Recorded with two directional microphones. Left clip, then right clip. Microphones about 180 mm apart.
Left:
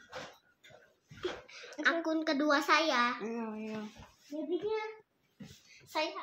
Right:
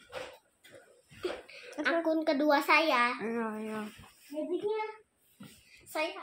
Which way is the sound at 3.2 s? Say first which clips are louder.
Right 5 dB; 45° right (ahead or behind).